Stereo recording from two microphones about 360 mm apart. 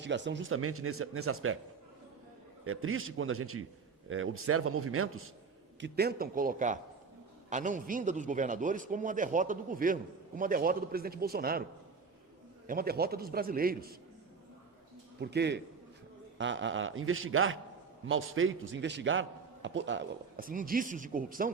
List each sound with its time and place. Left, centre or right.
0.0 s speech: right
2.6 s speech: right
5.8 s a man's voice: right
12.6 s a man's voice: right
15.2 s a man's voice: right